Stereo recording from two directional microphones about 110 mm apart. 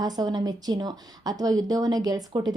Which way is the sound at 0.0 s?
40° right (ahead or behind).